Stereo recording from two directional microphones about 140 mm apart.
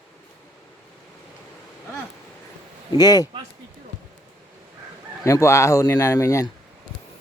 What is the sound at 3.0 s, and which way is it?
Speech, 30° left (ahead or behind).